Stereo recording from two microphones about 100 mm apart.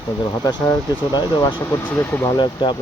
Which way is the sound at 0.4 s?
40° left (ahead or behind).